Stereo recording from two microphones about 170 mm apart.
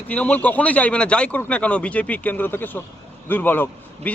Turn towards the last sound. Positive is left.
turn(degrees=10)  # may be behind; listen again after turning